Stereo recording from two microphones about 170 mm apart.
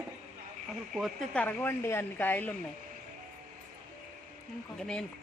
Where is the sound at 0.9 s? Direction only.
Centre (ahead or behind).